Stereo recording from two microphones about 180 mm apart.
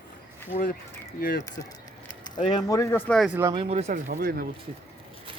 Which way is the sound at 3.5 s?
30° right (ahead or behind).